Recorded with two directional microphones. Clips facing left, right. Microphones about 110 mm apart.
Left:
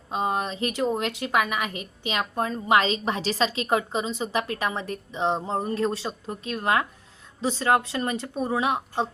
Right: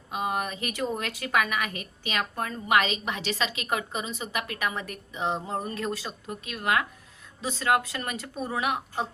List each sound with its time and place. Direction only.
0.1 s a woman's voice: 30° left (ahead or behind)